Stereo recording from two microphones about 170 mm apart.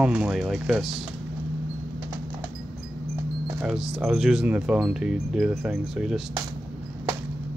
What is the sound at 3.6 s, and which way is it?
Speech, 5° right (ahead or behind).